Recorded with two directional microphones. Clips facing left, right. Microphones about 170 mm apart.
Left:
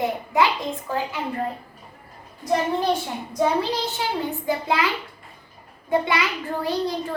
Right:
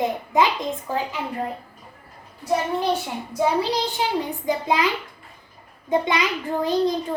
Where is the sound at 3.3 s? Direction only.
10° right (ahead or behind).